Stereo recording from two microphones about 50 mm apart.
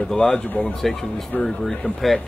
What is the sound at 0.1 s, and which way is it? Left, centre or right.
Speech, centre.